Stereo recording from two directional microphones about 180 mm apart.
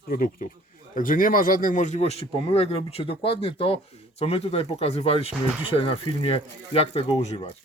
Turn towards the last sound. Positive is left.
turn(degrees=35)  # may be behind; listen again after turning